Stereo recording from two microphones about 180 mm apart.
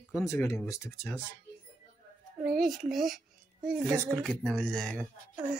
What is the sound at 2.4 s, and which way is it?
A child's voice, centre (ahead or behind).